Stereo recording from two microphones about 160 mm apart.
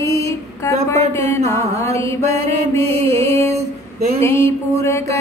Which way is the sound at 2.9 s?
40° right (ahead or behind).